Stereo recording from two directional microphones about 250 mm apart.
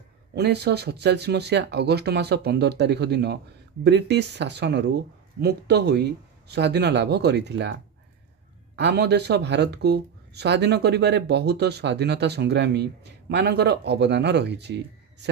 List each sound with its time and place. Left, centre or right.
0.3 s speech: right